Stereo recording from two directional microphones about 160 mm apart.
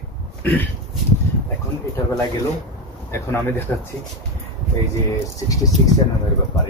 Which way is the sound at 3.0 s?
15° left (ahead or behind).